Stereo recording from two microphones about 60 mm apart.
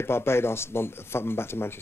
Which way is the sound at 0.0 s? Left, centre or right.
Left.